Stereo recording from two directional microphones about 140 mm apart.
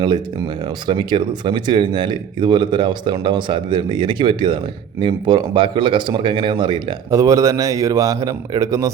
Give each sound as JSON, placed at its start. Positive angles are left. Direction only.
{"t": 0.9, "sound": "speech", "side_deg": -35}
{"t": 7.1, "sound": "a man's voice", "side_deg": -20}